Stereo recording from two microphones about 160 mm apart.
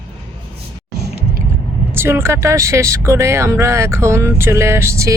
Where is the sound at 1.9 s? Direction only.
15° right (ahead or behind).